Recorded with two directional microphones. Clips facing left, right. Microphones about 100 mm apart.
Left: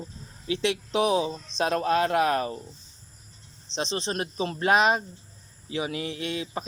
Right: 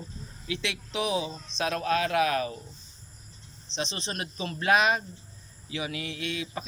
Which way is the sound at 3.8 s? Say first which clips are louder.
Left 5 dB; 35° left (ahead or behind).